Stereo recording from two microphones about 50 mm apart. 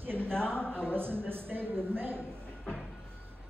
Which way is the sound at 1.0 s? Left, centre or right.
Right.